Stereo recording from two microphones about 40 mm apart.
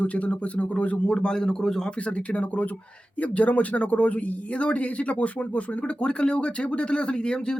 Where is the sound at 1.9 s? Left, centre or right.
Left.